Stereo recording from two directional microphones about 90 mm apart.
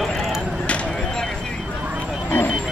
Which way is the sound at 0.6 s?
15° left (ahead or behind).